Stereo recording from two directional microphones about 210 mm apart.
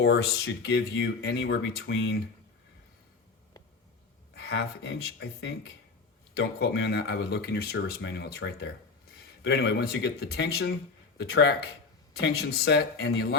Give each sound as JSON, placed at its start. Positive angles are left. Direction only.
{"t": 0.0, "sound": "speech", "side_deg": 55}
{"t": 4.4, "sound": "speech", "side_deg": 55}